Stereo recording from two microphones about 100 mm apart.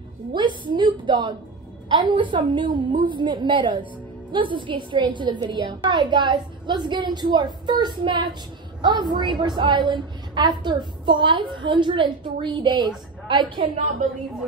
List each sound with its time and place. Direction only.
0.3 s a woman's voice: 50° right (ahead or behind)